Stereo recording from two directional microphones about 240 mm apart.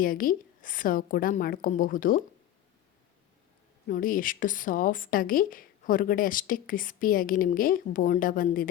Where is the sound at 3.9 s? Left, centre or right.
Left.